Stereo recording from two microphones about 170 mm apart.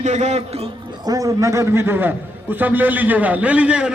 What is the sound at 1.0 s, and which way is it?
A man's voice, 20° right (ahead or behind).